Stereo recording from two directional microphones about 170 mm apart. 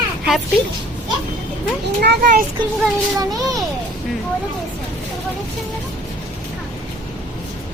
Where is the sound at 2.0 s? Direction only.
80° right.